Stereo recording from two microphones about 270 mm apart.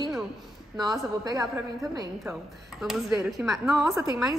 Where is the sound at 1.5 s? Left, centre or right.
Centre.